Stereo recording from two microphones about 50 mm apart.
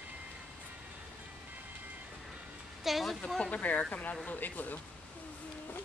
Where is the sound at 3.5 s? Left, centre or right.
Left.